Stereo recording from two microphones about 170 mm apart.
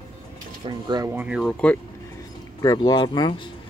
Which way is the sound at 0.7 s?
25° right (ahead or behind).